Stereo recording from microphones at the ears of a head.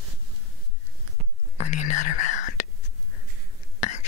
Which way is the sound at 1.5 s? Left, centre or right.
Left.